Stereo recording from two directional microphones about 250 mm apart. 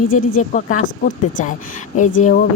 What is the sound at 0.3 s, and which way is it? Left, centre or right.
Speech, left.